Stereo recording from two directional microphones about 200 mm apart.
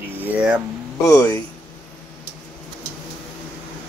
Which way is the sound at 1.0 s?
15° left (ahead or behind).